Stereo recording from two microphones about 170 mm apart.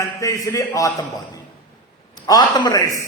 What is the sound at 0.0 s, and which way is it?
A man's voice, 20° left (ahead or behind).